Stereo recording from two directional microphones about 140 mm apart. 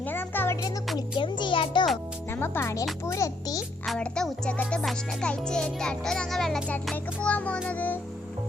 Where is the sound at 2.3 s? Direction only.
15° left (ahead or behind).